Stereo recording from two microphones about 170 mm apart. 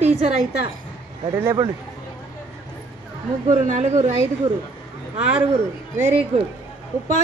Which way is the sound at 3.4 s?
45° right (ahead or behind).